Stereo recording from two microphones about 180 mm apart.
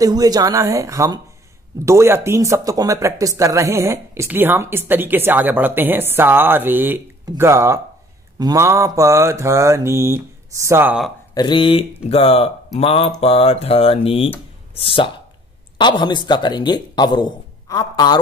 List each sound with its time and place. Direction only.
0.0 s speech: 20° right (ahead or behind)
11.3 s speech: 25° left (ahead or behind)